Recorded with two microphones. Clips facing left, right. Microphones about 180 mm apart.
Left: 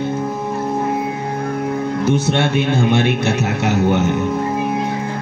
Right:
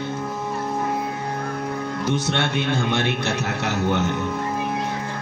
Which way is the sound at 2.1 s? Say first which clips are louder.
Left 6 dB; 10° left (ahead or behind).